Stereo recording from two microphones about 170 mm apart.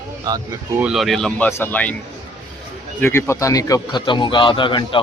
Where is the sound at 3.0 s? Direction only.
15° left (ahead or behind).